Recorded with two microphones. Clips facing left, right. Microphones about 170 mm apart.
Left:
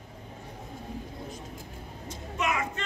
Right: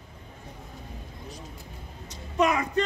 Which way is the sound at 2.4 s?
35° right (ahead or behind).